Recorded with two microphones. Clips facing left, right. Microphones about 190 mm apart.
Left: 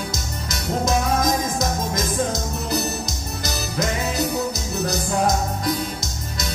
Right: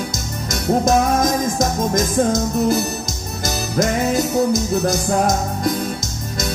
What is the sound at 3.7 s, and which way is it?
Music, 45° right (ahead or behind).